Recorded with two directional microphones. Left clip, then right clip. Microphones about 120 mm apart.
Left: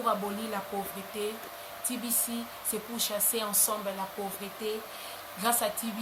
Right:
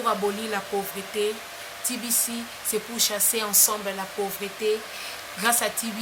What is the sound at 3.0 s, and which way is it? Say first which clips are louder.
Speech: right 5 dB; 15° right (ahead or behind).